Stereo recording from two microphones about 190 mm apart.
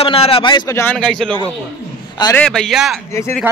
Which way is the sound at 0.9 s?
5° left (ahead or behind).